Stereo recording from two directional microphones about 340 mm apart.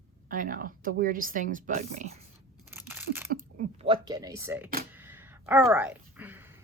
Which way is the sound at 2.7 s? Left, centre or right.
Centre.